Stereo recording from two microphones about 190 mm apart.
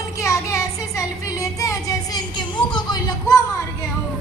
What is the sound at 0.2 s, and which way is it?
Child singing, 15° left (ahead or behind).